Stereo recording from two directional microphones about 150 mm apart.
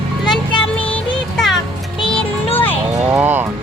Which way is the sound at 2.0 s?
35° left (ahead or behind).